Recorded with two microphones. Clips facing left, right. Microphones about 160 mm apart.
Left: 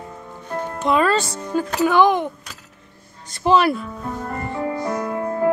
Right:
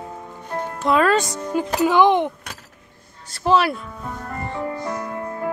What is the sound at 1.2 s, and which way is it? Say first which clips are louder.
Speech: even; 15° right (ahead or behind).